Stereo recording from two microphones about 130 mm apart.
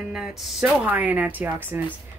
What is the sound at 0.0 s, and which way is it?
Speech, centre (ahead or behind).